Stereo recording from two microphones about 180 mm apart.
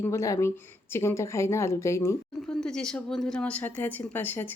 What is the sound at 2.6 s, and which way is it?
A woman's voice, 5° left (ahead or behind).